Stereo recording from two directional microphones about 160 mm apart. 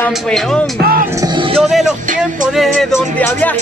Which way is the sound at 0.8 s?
65° right (ahead or behind).